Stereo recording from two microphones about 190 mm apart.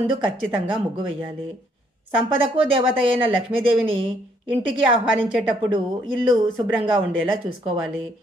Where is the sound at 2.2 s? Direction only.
25° right (ahead or behind).